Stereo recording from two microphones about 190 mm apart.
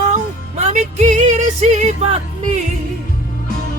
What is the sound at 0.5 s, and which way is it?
Music, 35° right (ahead or behind).